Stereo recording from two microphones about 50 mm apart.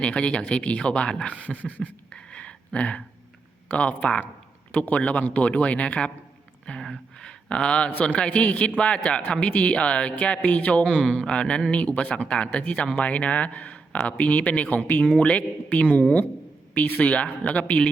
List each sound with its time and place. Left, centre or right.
0.0 s speech: left
2.0 s a sound: left
3.8 s speech: left
5.2 s speech: left
6.7 s a sound: centre
8.0 s speech: left